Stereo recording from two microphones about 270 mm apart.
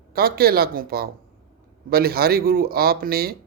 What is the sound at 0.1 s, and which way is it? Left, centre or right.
Speech, right.